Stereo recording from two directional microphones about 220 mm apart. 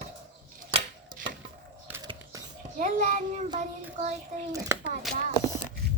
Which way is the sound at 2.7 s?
35° right (ahead or behind).